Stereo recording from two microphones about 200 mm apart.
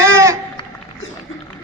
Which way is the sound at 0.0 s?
15° right (ahead or behind).